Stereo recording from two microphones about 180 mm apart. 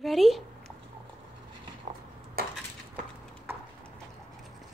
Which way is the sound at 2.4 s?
60° right (ahead or behind).